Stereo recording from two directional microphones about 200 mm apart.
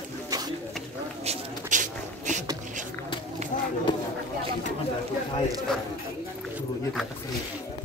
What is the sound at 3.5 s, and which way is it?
Run, 40° left (ahead or behind).